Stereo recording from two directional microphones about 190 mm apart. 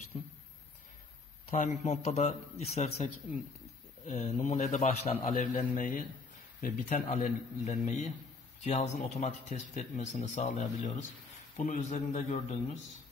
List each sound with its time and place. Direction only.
0.1 s speech: 35° left (ahead or behind)
1.5 s speech: 40° left (ahead or behind)